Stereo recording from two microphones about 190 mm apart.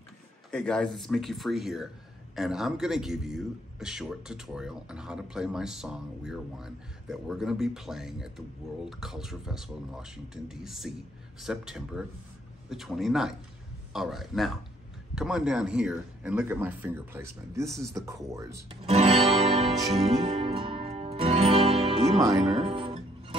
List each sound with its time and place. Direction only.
0.5 s speech: 5° left (ahead or behind); by 18.8 s 15° right (ahead or behind)
18.9 s music: 35° right (ahead or behind)